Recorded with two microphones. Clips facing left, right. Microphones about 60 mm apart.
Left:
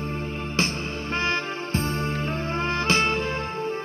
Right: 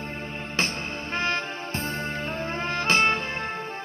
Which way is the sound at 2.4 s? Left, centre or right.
Right.